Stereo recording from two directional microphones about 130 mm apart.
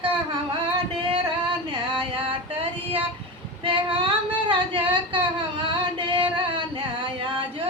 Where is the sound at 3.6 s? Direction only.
40° right (ahead or behind).